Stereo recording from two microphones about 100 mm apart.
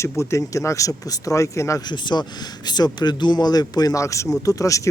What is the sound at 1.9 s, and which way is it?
Speech, 50° left (ahead or behind).